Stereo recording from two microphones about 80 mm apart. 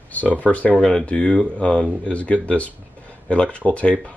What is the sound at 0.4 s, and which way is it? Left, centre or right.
Speech, centre.